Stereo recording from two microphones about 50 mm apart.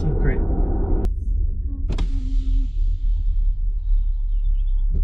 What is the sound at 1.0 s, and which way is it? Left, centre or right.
Power windows, centre.